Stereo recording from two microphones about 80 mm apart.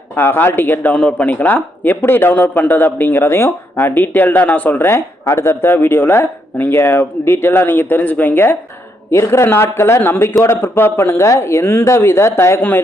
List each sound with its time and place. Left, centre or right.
0.2 s speech: left
0.9 s speech: centre
4.9 s speech: left
9.0 s speech: left